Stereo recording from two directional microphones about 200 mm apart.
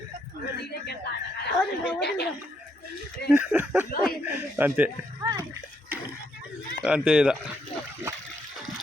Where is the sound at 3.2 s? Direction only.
5° right (ahead or behind).